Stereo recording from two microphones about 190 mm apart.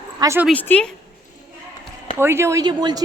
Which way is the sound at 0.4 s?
10° left (ahead or behind).